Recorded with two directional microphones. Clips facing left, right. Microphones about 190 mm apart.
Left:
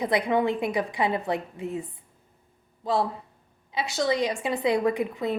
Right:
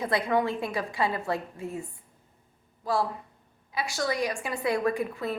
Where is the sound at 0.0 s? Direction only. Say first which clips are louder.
Left 2 dB; 15° left (ahead or behind).